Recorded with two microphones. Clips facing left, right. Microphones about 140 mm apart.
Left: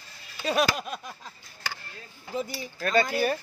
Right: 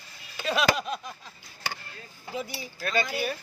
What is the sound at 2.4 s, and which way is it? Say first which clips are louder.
Speech: left 3 dB; 40° left (ahead or behind).